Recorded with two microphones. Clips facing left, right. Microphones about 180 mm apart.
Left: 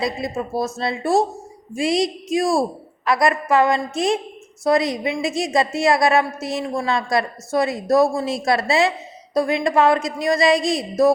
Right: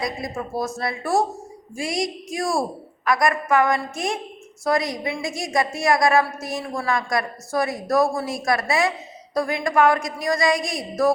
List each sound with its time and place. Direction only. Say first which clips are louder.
0.0 s a woman's voice: left 4 dB; 25° left (ahead or behind)